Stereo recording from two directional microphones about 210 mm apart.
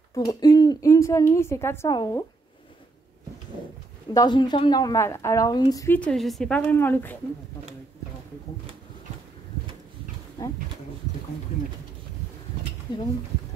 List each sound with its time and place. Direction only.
0.1 s a woman's voice: 15° left (ahead or behind)
4.1 s a woman's voice: 20° left (ahead or behind)
10.4 s a woman's voice: 15° left (ahead or behind)